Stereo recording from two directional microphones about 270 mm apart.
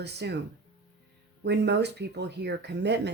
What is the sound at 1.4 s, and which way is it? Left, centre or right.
A woman's voice, right.